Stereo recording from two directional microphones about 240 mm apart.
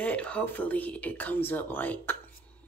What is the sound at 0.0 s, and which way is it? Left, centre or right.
Speech, centre.